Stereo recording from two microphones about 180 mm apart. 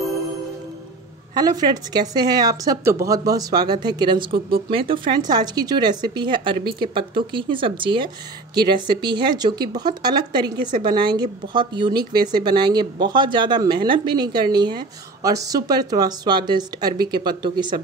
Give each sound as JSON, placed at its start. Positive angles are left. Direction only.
{"t": 1.3, "sound": "speech", "side_deg": -20}